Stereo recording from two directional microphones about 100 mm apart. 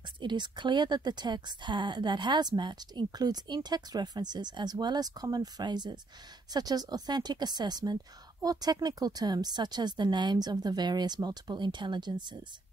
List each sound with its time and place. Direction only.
0.2 s a woman's voice: 50° right (ahead or behind)